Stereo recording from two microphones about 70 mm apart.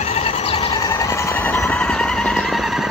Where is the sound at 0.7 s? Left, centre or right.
Left.